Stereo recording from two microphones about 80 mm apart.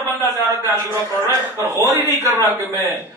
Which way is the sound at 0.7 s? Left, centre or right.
Right.